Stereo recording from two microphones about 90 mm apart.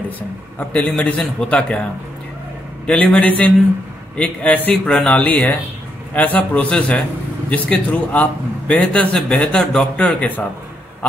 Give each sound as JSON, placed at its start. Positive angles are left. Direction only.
{"t": 0.6, "sound": "a man's voice", "side_deg": 15}
{"t": 2.9, "sound": "a man's voice", "side_deg": 10}